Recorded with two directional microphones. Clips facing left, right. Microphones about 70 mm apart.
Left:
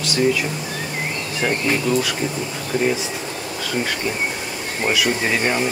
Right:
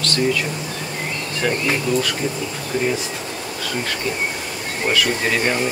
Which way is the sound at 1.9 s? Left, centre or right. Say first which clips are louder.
Even; left.